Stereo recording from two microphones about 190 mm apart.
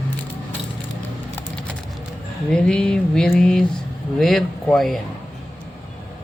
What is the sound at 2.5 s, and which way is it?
A man's voice, 5° left (ahead or behind).